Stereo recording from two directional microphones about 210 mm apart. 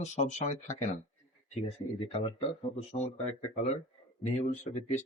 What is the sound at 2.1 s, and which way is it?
Speech, 25° left (ahead or behind).